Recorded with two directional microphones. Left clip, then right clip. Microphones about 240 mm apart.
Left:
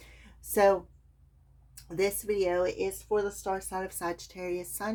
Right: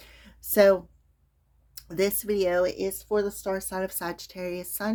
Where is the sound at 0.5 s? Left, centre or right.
Right.